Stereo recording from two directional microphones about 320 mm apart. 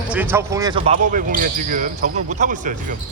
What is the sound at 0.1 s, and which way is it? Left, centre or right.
Speech, centre.